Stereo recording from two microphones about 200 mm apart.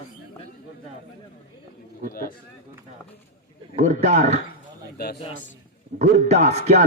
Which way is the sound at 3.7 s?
35° right (ahead or behind).